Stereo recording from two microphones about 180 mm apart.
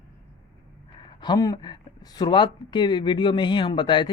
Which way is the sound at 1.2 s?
20° left (ahead or behind).